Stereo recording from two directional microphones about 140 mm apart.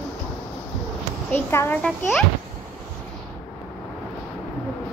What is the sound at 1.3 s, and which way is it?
Speech, 15° left (ahead or behind).